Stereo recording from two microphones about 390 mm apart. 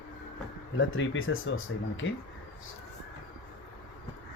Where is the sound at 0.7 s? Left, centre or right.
Left.